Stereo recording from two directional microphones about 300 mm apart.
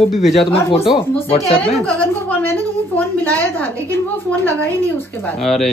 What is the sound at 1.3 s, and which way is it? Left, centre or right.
Speech, centre.